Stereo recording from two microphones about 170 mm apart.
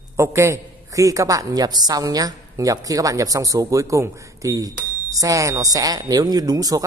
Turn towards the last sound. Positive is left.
turn(degrees=-20)  # may be behind; listen again after turning